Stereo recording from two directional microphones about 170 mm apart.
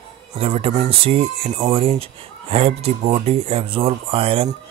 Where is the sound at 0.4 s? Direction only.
35° right (ahead or behind).